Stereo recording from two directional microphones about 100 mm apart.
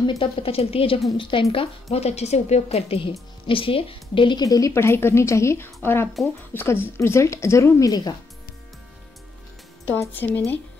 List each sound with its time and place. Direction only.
0.2 s a woman's voice: 70° left (ahead or behind)
1.1 s speech: 60° left (ahead or behind)
1.5 s speech: 80° left; by 8.1 s 40° left (ahead or behind)
9.9 s speech: 20° left (ahead or behind)